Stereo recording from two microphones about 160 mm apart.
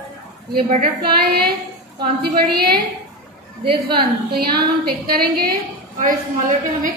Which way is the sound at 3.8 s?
75° right (ahead or behind).